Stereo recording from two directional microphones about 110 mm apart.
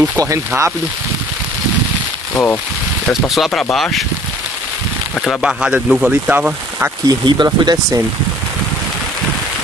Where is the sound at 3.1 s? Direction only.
Centre (ahead or behind).